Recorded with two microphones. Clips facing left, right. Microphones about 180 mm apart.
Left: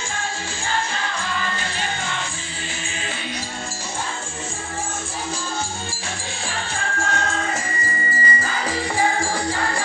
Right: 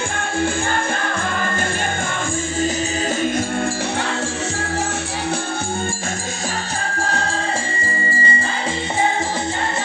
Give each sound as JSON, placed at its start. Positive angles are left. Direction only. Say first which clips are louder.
{"t": 7.0, "sound": "music", "louder": "right 1 dB", "side_deg": -35}